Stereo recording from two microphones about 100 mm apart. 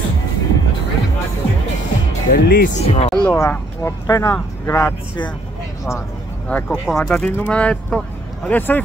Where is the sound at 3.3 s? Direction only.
30° left (ahead or behind).